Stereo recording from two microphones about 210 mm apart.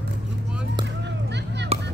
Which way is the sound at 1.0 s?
55° right (ahead or behind).